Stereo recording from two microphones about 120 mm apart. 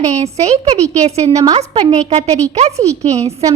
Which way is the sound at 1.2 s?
30° right (ahead or behind).